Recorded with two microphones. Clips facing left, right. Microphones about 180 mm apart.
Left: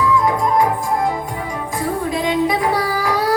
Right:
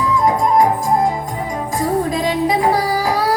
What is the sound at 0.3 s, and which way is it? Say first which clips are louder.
Music: right 2 dB; 40° right (ahead or behind).